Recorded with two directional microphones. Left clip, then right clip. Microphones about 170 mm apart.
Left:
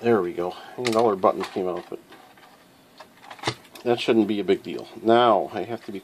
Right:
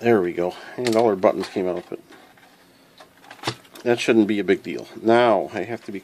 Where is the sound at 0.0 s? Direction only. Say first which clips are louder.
Right 3 dB; 40° right (ahead or behind).